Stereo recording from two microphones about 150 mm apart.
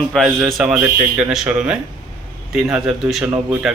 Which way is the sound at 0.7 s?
15° right (ahead or behind).